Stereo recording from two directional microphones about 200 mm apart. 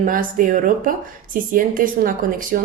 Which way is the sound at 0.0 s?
45° right (ahead or behind).